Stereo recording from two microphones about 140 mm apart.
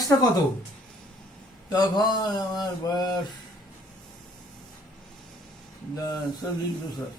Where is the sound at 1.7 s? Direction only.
30° left (ahead or behind).